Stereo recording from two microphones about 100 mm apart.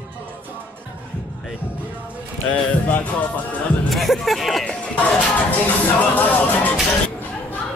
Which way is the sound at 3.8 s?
Centre (ahead or behind).